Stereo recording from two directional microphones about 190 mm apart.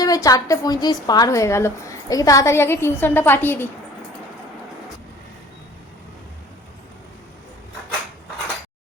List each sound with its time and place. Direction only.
0.0 s a woman's voice: 20° left (ahead or behind)